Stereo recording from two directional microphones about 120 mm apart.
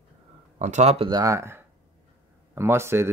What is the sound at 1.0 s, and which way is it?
Speech, 30° right (ahead or behind).